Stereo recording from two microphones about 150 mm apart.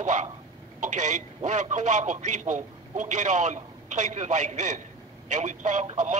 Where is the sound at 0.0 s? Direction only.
55° right (ahead or behind).